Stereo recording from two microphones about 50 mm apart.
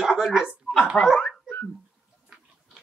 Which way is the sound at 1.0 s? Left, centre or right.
Centre.